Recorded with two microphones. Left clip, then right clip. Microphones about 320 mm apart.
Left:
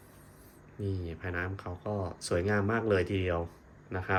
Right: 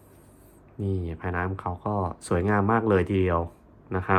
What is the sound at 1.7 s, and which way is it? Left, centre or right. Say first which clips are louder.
Speech: right 7 dB; right.